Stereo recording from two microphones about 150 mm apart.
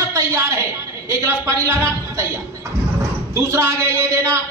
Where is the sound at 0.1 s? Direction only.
20° right (ahead or behind).